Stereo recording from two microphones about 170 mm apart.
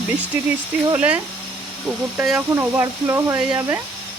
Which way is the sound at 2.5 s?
15° right (ahead or behind).